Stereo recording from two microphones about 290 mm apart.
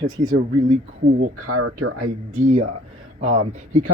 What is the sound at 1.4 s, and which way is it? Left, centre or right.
Speech, right.